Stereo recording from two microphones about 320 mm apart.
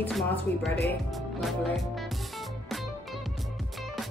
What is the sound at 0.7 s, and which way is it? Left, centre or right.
Speech, left.